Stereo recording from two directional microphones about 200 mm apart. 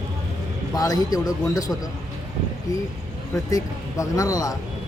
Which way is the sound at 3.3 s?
15° left (ahead or behind).